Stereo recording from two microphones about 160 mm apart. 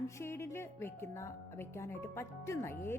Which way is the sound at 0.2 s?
15° left (ahead or behind).